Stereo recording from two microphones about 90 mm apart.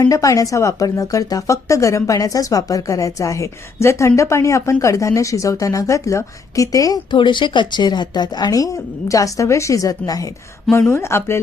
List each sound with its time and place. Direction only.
0.0 s a woman's voice: 40° left (ahead or behind)
7.1 s speech: 60° left (ahead or behind); by 10.2 s 40° left (ahead or behind)
10.8 s speech: 25° left (ahead or behind)